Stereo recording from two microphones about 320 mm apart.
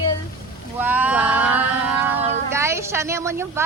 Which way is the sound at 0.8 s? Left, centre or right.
Centre.